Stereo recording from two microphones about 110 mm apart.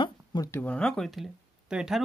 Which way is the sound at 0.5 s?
10° left (ahead or behind).